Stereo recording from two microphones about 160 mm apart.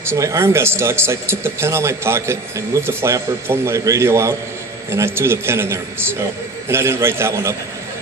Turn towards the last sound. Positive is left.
turn(degrees=-15)  # may be behind; listen again after turning